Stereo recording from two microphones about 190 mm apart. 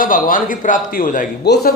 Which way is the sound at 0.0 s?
45° left (ahead or behind).